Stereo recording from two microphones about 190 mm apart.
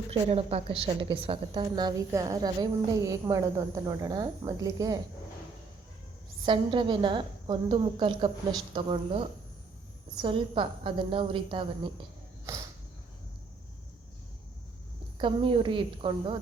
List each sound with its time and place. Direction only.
0.1 s a woman's voice: 30° right (ahead or behind)
6.4 s a woman's voice: 25° right (ahead or behind)
15.2 s a woman's voice: 30° right (ahead or behind)